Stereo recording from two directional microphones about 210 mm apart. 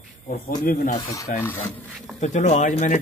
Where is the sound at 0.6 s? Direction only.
45° left (ahead or behind).